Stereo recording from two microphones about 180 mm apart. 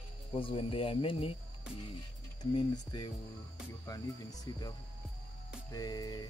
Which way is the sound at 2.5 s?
25° left (ahead or behind).